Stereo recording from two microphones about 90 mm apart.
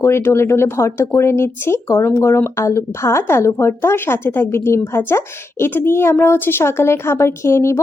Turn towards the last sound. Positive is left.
turn(degrees=30)  # may be behind; listen again after turning